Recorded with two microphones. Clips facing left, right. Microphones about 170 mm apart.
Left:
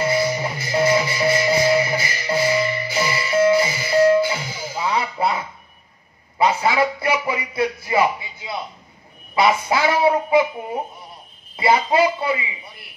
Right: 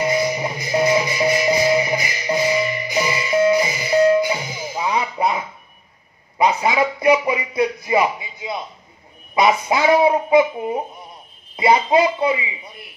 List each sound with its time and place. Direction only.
0.0 s music: 15° right (ahead or behind)
6.3 s a man's voice: 15° right (ahead or behind)
11.5 s a man's voice: 20° right (ahead or behind)